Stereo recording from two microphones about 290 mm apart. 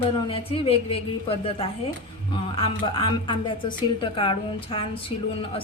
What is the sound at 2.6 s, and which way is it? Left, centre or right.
A woman's voice, centre.